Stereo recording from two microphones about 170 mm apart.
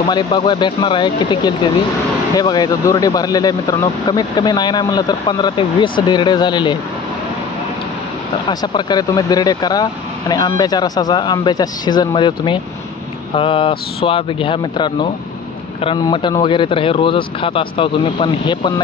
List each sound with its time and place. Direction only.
0.0 s speech: 30° left (ahead or behind)
8.5 s speech: 25° left (ahead or behind)